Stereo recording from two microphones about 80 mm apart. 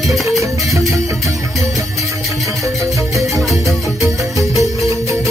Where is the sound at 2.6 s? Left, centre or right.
Right.